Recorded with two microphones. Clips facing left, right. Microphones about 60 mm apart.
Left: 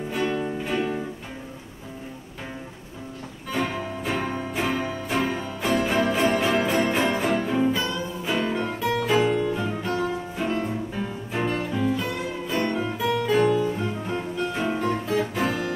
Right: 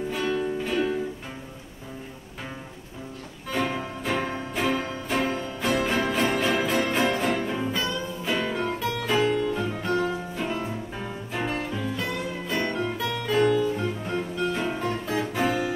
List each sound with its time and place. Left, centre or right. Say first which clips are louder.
0.2 s music: left 1 dB; centre
3.5 s music: even; centre
11.7 s music: left 4 dB; centre